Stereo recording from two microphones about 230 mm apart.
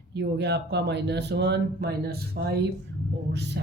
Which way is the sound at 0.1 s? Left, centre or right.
Right.